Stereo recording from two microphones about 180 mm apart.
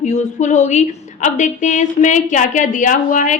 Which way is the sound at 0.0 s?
40° left (ahead or behind).